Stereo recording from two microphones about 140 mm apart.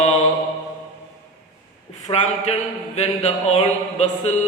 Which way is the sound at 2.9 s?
50° left (ahead or behind).